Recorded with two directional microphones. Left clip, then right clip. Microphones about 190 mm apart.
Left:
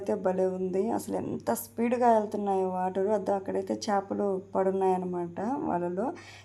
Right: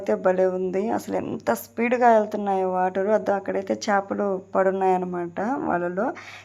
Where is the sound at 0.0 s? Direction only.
15° right (ahead or behind).